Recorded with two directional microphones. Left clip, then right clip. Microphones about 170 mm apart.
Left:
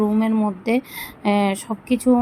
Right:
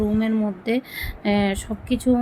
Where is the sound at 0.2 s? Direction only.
15° left (ahead or behind).